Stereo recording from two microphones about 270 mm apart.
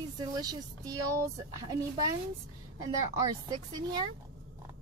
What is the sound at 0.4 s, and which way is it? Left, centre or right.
Speech, centre.